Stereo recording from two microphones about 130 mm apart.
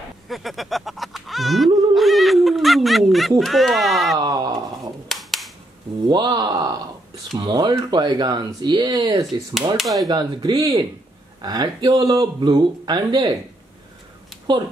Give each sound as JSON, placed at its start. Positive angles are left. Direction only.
{"t": 0.3, "sound": "speech", "side_deg": 0}
{"t": 2.0, "sound": "a sound", "side_deg": 0}
{"t": 4.2, "sound": "speech", "side_deg": -30}
{"t": 5.0, "sound": "cap gun", "side_deg": 0}
{"t": 6.0, "sound": "speech", "side_deg": -35}
{"t": 9.8, "sound": "speech", "side_deg": 0}
{"t": 10.0, "sound": "speech", "side_deg": -30}